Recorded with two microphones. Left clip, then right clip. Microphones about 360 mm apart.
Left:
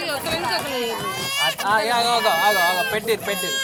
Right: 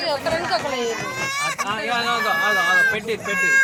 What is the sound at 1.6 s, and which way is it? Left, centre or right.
Speech, centre.